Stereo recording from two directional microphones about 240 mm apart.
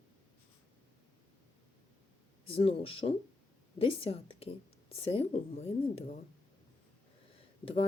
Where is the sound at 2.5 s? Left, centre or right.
Left.